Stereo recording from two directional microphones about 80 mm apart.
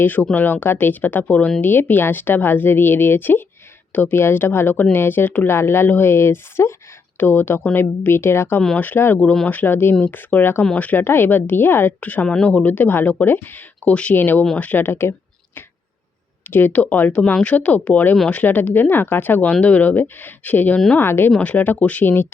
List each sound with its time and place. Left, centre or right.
0.0 s speech: left
11.9 s speech: centre
16.5 s speech: left
21.3 s speech: centre